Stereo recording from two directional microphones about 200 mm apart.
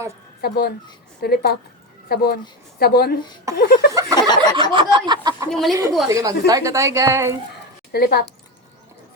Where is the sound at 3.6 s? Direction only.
55° left (ahead or behind).